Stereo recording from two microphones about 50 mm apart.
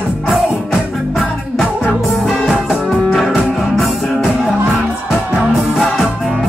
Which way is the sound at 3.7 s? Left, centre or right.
Centre.